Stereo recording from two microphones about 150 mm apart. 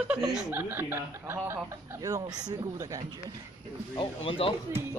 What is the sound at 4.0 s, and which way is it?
Speech, 35° left (ahead or behind).